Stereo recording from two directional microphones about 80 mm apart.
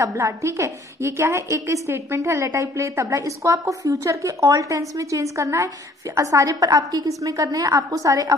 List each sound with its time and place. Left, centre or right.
0.0 s a woman's voice: right